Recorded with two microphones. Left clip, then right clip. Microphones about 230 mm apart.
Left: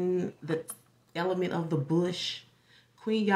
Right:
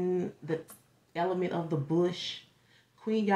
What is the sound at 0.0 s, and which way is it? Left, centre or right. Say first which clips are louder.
Speech: left 1 dB; centre.